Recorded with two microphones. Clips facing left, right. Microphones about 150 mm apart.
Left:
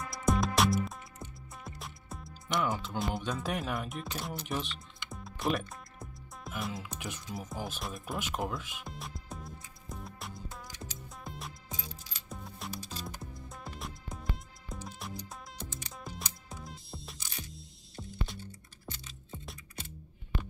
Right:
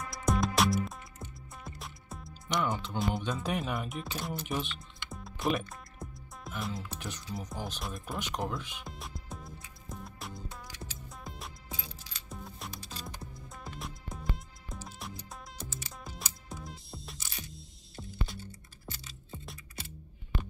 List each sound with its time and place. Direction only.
0.0 s music: centre (ahead or behind)